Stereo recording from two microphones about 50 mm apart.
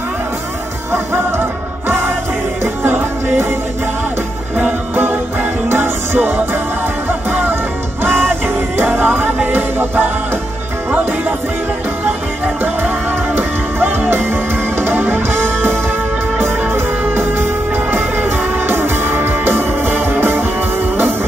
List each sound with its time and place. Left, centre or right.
2.6 s music: right
4.9 s music: right
12.8 s music: right